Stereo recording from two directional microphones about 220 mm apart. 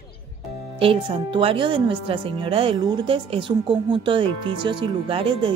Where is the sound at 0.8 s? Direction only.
25° right (ahead or behind).